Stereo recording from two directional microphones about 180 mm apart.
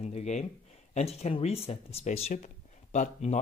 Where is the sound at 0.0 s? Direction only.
40° left (ahead or behind).